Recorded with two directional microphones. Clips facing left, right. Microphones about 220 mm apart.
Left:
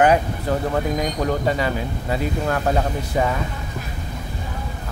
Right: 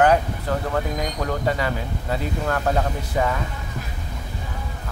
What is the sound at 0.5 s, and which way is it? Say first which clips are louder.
Speech: left 3 dB; 15° left (ahead or behind).